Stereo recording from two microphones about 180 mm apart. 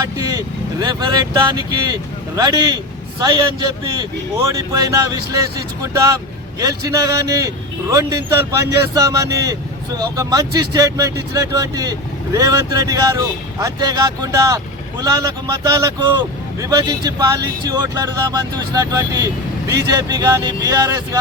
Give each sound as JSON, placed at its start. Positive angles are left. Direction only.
{"t": 0.0, "sound": "speech", "side_deg": -20}